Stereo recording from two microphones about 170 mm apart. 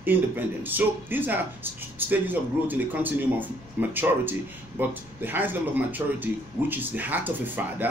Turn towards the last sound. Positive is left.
turn(degrees=-10)  # may be behind; listen again after turning